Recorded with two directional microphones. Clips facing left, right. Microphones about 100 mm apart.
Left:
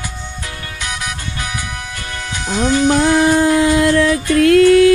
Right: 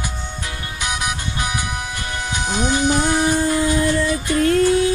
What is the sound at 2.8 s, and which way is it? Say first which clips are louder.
Music: left 6 dB; 90° left.